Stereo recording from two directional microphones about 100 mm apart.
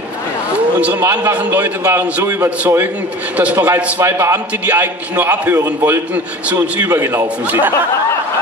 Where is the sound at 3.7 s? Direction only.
15° right (ahead or behind).